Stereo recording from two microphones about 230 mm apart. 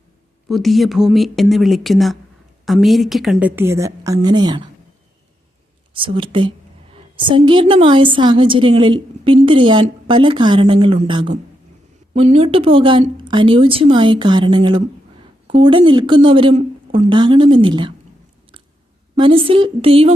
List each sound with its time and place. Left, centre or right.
0.4 s a woman's voice: centre
5.9 s a woman's voice: right
19.2 s a woman's voice: right